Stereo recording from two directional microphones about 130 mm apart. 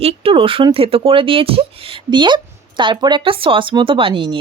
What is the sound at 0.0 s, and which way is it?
Speech, 45° right (ahead or behind).